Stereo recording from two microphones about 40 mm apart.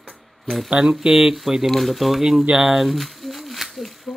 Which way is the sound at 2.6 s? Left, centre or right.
Centre.